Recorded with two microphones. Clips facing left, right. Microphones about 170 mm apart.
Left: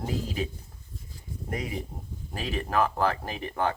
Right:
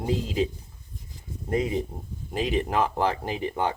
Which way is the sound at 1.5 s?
25° right (ahead or behind).